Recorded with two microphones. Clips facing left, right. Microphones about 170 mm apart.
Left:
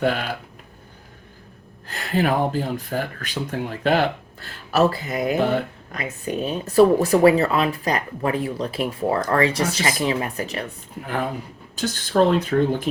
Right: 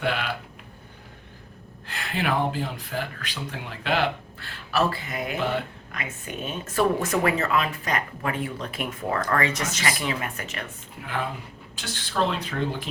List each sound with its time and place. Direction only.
0.0 s speech: 45° left (ahead or behind)
1.9 s speech: 40° left (ahead or behind)